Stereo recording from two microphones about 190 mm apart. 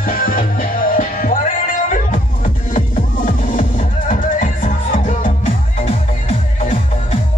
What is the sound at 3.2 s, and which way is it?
Music, 45° left (ahead or behind).